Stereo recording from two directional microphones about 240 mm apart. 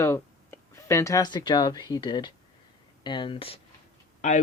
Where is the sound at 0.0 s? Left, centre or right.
Centre.